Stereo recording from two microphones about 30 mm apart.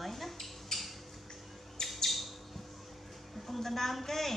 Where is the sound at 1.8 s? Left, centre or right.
Centre.